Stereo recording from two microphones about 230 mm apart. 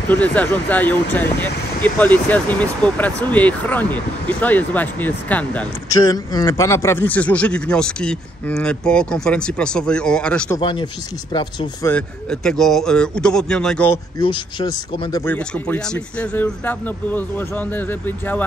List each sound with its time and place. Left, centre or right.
0.1 s speech: centre
10.6 s speech: left
11.9 s speech: centre
14.1 s speech: centre